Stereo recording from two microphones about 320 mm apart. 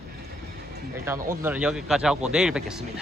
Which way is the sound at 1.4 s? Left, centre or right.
Centre.